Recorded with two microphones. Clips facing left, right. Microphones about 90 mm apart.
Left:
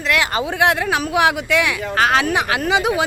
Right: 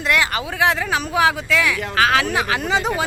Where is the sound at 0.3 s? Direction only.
20° left (ahead or behind).